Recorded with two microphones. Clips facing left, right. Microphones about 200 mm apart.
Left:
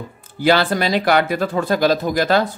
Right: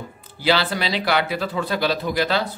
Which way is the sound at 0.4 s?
50° left (ahead or behind).